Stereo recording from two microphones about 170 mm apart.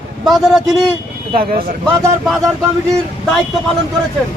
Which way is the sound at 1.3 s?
60° right (ahead or behind).